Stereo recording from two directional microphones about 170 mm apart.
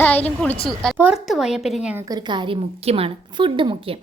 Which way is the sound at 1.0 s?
5° right (ahead or behind).